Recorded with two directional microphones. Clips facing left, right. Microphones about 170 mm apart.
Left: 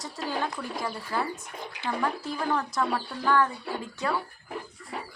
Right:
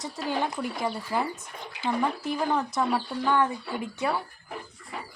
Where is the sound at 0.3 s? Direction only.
20° right (ahead or behind).